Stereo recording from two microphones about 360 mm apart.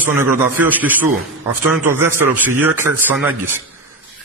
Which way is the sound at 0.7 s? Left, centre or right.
Centre.